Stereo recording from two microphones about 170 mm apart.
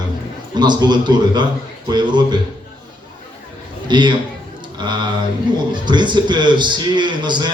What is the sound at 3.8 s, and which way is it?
Speech, 25° right (ahead or behind).